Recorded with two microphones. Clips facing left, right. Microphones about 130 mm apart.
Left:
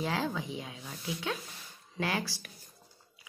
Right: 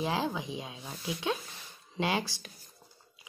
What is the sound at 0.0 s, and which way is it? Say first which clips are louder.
Speech: right 1 dB; 20° right (ahead or behind).